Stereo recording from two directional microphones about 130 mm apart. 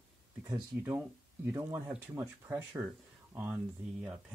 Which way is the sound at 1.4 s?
15° right (ahead or behind).